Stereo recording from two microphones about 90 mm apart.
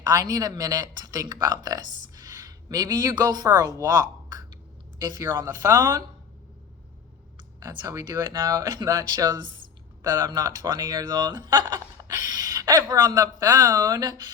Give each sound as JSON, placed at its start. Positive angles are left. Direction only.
{"t": 0.0, "sound": "speech", "side_deg": -45}
{"t": 8.1, "sound": "speech", "side_deg": -45}